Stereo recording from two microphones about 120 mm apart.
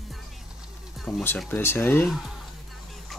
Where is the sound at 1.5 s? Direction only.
20° left (ahead or behind).